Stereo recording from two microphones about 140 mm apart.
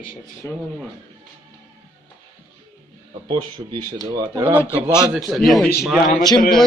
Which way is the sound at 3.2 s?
35° right (ahead or behind).